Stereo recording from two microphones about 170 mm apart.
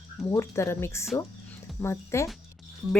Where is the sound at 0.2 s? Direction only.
15° left (ahead or behind).